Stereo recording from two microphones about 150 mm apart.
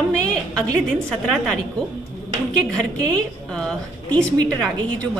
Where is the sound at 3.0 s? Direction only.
5° left (ahead or behind).